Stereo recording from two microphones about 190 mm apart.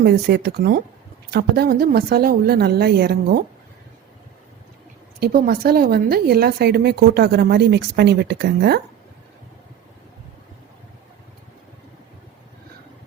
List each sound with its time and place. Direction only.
0.0 s speech: 60° right (ahead or behind)
5.2 s speech: 55° right (ahead or behind)